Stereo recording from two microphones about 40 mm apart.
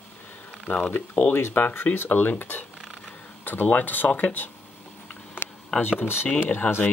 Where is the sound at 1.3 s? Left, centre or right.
Left.